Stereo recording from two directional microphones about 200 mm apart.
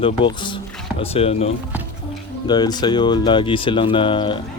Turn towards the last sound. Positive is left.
turn(degrees=25)  # may be behind; listen again after turning